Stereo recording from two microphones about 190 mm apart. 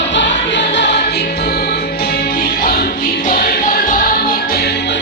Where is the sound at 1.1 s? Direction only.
55° left (ahead or behind).